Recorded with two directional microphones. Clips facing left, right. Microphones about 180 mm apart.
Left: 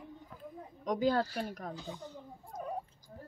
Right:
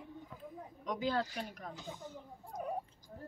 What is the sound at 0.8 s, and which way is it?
Speech, 45° left (ahead or behind).